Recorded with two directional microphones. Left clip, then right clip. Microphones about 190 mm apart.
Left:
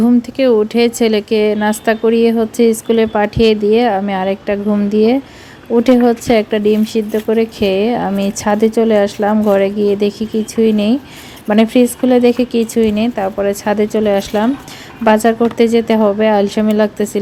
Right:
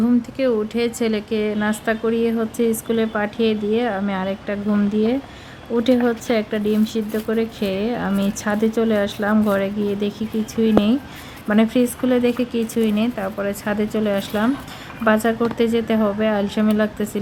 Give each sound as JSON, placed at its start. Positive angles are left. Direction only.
{"t": 0.0, "sound": "speech", "side_deg": 25}